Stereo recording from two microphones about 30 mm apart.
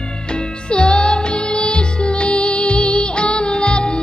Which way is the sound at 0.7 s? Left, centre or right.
Left.